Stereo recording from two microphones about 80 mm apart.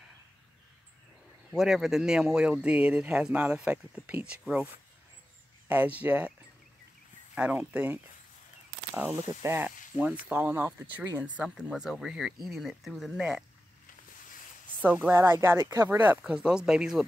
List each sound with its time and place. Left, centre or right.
1.5 s speech: centre
5.7 s speech: right
7.3 s speech: centre
9.4 s speech: right
9.7 s speech: centre
11.4 s speech: centre
14.8 s speech: right
16.3 s speech: centre